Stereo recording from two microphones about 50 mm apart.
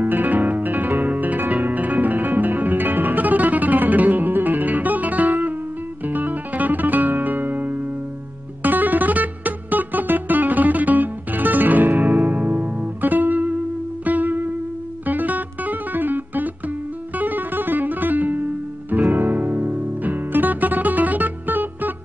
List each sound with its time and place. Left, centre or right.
0.0 s music: right
15.0 s guitar: right
19.1 s music: right